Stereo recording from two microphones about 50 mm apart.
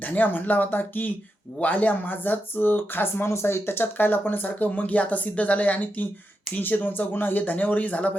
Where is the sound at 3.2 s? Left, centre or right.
Left.